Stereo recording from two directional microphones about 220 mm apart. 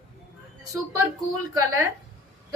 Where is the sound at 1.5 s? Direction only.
15° right (ahead or behind).